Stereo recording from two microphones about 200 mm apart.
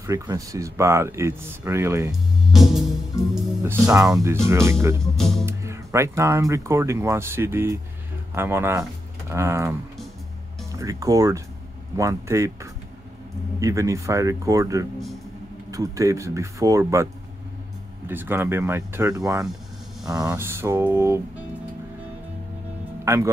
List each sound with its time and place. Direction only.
0.0 s speech: 15° right (ahead or behind)
2.5 s music: centre (ahead or behind)
3.9 s speech: 15° right (ahead or behind)
5.1 s speech: centre (ahead or behind)
5.4 s speech: 15° right (ahead or behind)
13.6 s speech: 15° right (ahead or behind)
23.0 s speech: 15° right (ahead or behind)